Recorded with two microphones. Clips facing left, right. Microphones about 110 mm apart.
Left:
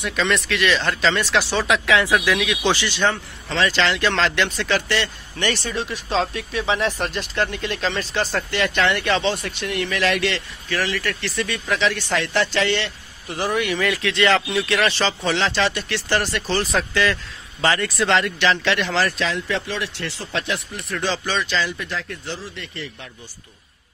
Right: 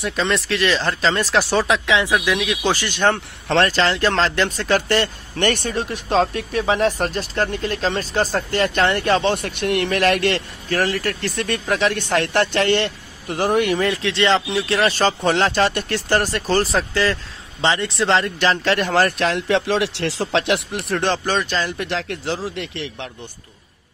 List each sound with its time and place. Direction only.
0.0 s speech: 30° right (ahead or behind)
1.9 s speech: 20° right (ahead or behind)
2.4 s speech: 35° right (ahead or behind); by 3.7 s 60° right (ahead or behind)
3.7 s speech: 40° right (ahead or behind)
13.7 s speech: 30° right (ahead or behind)
16.7 s a man's voice: 35° right (ahead or behind)
17.6 s speech: 25° right (ahead or behind); by 20.8 s 70° right (ahead or behind)
21.0 s speech: 50° right (ahead or behind)
21.8 s speech: 75° right (ahead or behind)